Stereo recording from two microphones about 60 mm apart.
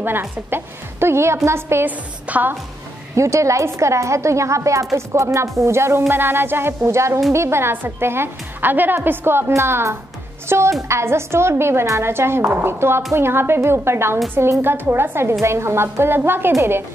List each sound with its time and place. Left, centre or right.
0.0 s a woman's voice: right
1.9 s a woman's voice: right
3.2 s a woman's voice: right
6.8 s a woman's voice: right